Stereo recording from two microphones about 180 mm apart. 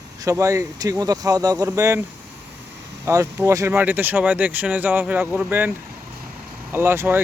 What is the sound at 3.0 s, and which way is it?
Speech, 15° right (ahead or behind).